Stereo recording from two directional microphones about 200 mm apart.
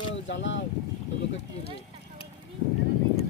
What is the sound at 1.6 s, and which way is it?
Vehicle, 30° left (ahead or behind).